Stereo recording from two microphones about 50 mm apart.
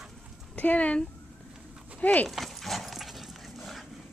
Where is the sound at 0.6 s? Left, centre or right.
Left.